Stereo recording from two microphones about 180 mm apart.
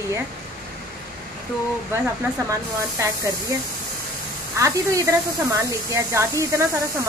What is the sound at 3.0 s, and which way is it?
Speech, 15° right (ahead or behind).